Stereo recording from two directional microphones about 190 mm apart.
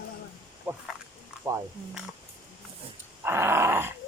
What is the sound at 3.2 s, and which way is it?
Dog, 10° right (ahead or behind).